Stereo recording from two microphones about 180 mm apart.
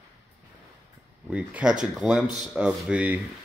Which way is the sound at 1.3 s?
5° right (ahead or behind).